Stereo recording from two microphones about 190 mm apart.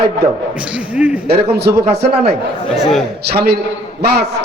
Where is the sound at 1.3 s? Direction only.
60° right (ahead or behind).